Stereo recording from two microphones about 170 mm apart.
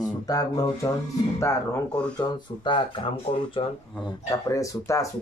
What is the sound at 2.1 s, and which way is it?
Speech, 30° left (ahead or behind).